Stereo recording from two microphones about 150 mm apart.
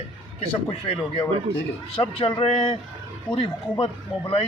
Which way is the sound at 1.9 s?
40° left (ahead or behind).